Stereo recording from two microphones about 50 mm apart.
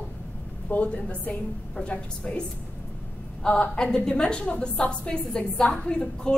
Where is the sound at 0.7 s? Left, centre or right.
Left.